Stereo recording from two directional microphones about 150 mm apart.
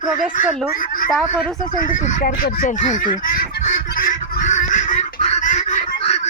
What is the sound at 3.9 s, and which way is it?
Fowl, 70° left (ahead or behind).